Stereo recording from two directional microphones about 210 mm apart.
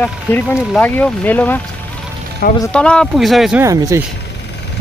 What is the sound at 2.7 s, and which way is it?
Speech, 5° left (ahead or behind).